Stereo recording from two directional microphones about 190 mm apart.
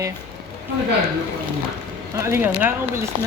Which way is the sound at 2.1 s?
15° right (ahead or behind).